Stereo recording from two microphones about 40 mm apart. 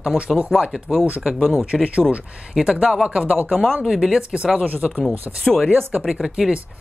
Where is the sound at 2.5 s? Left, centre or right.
Centre.